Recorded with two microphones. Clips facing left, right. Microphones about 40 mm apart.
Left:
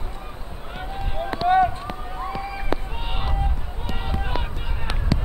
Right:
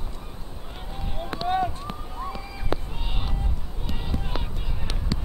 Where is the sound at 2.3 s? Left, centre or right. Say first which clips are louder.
Left 6 dB; left.